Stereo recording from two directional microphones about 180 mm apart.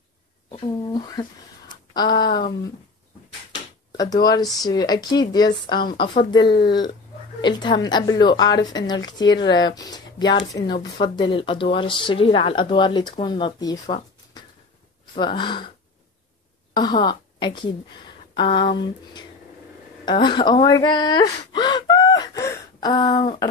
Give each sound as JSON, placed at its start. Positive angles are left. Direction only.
{"t": 0.5, "sound": "speech", "side_deg": 20}
{"t": 3.9, "sound": "speech", "side_deg": 20}
{"t": 15.1, "sound": "speech", "side_deg": 25}
{"t": 16.7, "sound": "a woman's voice", "side_deg": 25}